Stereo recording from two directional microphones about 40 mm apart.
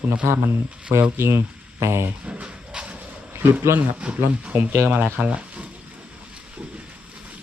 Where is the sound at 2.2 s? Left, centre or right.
Right.